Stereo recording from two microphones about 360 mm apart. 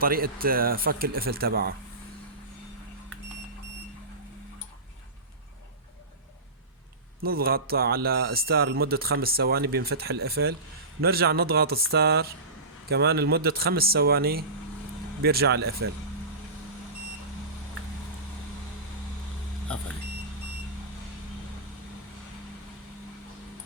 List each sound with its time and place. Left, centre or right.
0.0 s speech: right
7.2 s speech: right